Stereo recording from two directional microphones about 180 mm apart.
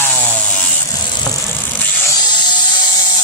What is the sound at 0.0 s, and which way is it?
Chainsaw, 10° left (ahead or behind).